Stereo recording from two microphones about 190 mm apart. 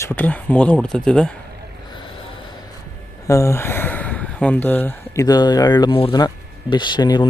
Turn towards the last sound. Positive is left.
turn(degrees=20)  # may be behind; listen again after turning